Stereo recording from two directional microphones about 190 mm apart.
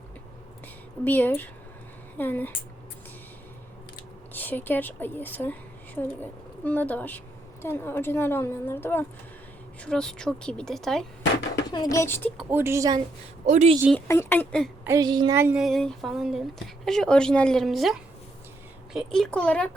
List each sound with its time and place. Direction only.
1.0 s a woman's voice: 10° left (ahead or behind)
4.4 s a woman's voice: 10° left (ahead or behind)
11.7 s a woman's voice: 20° left (ahead or behind)
12.4 s a woman's voice: 10° right (ahead or behind)
13.4 s speech: 40° right (ahead or behind)
13.9 s a woman's voice: 10° left (ahead or behind)
14.8 s speech: 20° right (ahead or behind)
15.4 s a woman's voice: 10° right (ahead or behind)
15.6 s speech: centre (ahead or behind)